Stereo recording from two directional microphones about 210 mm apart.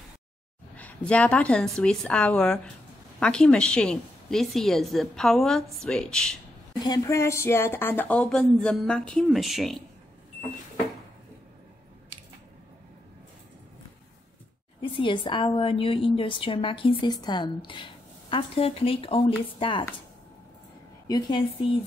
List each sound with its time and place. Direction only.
0.7 s a woman's voice: 5° left (ahead or behind)
6.8 s a woman's voice: 15° left (ahead or behind); by 9.8 s centre (ahead or behind)
14.8 s a woman's voice: 25° left (ahead or behind)
21.1 s a woman's voice: 25° left (ahead or behind)